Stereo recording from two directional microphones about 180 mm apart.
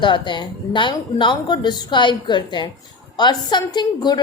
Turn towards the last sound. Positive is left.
turn(degrees=25)  # may be behind; listen again after turning